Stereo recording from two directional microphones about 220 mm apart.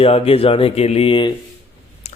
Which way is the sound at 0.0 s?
25° left (ahead or behind).